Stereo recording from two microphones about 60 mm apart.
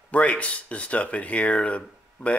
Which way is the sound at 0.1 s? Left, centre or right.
Left.